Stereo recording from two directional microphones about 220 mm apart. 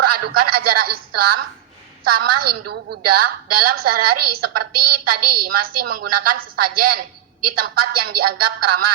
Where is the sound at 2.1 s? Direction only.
90° right.